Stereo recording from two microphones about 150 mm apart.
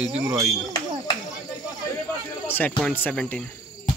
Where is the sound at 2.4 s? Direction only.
15° left (ahead or behind).